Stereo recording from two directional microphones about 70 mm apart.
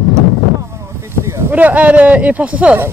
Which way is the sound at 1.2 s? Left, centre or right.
Right.